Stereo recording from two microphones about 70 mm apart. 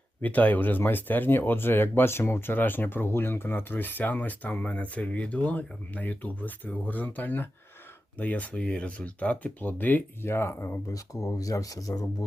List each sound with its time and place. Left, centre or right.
0.2 s speech: left
10.9 s speech: left